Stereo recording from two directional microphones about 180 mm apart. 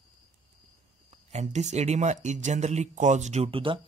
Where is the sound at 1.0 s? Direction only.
40° right (ahead or behind).